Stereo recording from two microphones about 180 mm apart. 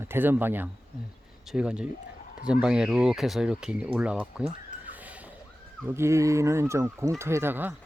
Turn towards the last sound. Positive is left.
turn(degrees=-10)  # may be behind; listen again after turning